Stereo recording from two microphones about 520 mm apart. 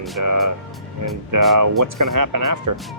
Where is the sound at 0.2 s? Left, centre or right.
Right.